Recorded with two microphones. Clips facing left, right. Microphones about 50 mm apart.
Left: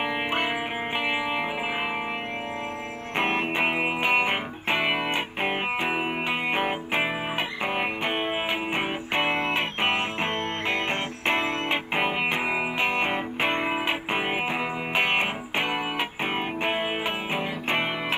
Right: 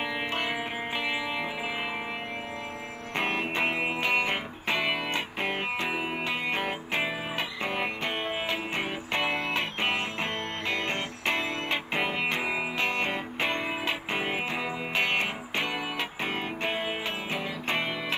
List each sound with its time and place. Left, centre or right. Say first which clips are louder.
0.0 s music: left 4 dB; left
3.2 s music: left 3 dB; left